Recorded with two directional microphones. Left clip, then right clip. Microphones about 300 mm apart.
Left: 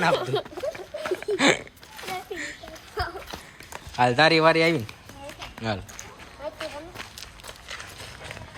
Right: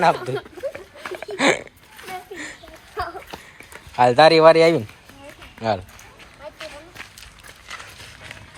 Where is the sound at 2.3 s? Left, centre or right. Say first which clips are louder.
Even; centre.